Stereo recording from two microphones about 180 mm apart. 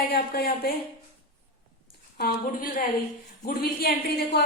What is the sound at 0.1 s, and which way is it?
Speech, 60° left (ahead or behind).